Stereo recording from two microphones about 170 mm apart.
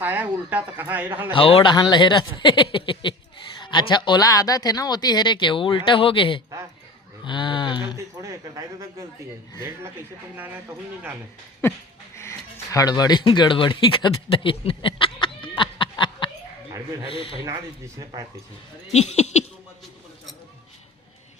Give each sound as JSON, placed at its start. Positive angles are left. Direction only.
{"t": 0.0, "sound": "a man's voice", "side_deg": -10}
{"t": 1.3, "sound": "speech", "side_deg": 30}
{"t": 7.3, "sound": "a sound", "side_deg": 30}
{"t": 7.9, "sound": "speech", "side_deg": -20}
{"t": 12.1, "sound": "a sound", "side_deg": 15}
{"t": 17.1, "sound": "speech", "side_deg": 30}
{"t": 17.4, "sound": "speech", "side_deg": -20}
{"t": 18.9, "sound": "speech", "side_deg": 40}